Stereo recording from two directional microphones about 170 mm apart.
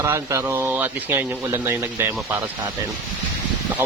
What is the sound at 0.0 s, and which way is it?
Speech, 15° right (ahead or behind).